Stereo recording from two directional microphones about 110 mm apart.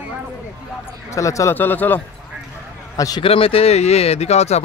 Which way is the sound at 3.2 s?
60° left (ahead or behind).